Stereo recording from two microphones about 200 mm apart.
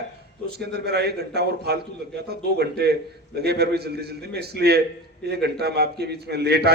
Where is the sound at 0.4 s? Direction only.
55° right (ahead or behind).